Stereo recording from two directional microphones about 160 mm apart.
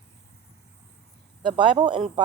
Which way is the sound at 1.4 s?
30° right (ahead or behind).